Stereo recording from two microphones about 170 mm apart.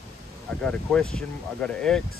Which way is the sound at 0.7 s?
5° left (ahead or behind).